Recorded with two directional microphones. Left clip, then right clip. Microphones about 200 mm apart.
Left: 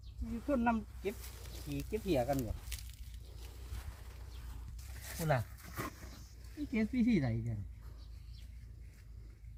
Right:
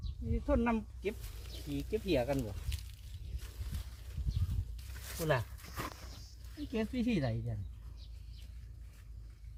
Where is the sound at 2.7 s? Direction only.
55° left (ahead or behind).